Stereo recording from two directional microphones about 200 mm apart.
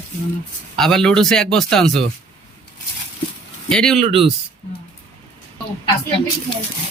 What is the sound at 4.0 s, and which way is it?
Speech, 30° right (ahead or behind).